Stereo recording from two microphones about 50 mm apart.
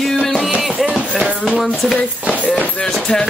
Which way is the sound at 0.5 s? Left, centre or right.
Centre.